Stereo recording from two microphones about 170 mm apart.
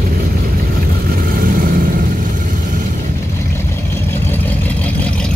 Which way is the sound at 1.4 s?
55° right (ahead or behind).